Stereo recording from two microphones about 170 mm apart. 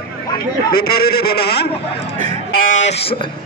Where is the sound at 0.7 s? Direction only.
65° left (ahead or behind).